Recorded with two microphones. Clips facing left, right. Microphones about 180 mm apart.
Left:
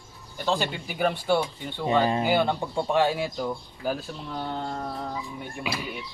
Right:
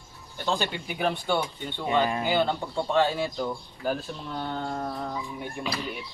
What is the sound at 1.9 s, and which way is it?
Speech, 30° left (ahead or behind).